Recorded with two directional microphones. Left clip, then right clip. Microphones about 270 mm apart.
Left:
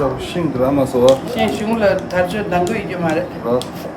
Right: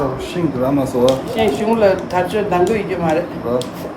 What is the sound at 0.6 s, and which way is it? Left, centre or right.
Speech, centre.